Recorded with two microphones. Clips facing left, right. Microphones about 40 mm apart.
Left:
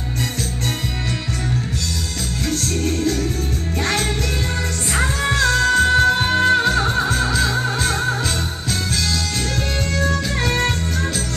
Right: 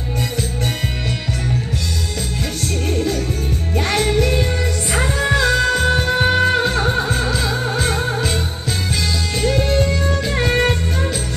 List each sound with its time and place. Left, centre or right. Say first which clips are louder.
3.8 s music: right 4 dB; centre
5.3 s music: even; centre
9.4 s music: right 6 dB; centre